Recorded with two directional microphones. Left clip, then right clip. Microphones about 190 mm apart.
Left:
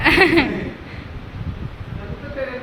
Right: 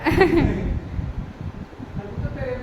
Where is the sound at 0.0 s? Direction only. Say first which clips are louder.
Left 5 dB; 5° right (ahead or behind).